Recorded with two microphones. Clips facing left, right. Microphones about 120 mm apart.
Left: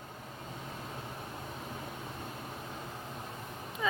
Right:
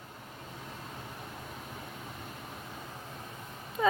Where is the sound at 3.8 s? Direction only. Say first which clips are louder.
Right 7 dB; 55° right (ahead or behind).